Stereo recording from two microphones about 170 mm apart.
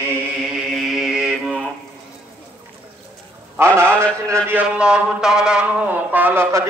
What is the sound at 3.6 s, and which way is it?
A man's voice, 15° right (ahead or behind).